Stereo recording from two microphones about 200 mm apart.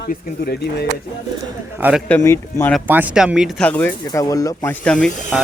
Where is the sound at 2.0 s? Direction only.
10° left (ahead or behind).